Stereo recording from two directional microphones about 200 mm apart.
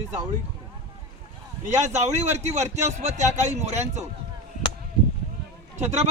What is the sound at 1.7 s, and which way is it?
A man's voice, 35° right (ahead or behind).